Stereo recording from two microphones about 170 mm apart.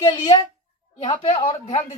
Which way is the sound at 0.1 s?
25° left (ahead or behind).